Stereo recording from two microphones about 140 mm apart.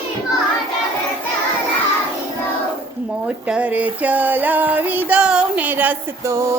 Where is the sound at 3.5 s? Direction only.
10° right (ahead or behind).